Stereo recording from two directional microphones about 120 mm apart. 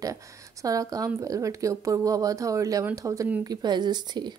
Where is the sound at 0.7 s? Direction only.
30° right (ahead or behind).